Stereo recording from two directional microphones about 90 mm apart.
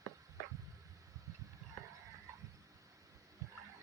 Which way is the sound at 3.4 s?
35° right (ahead or behind).